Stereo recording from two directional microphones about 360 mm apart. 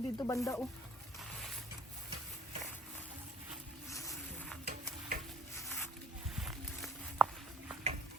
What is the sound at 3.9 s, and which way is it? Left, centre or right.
Vehicle, centre.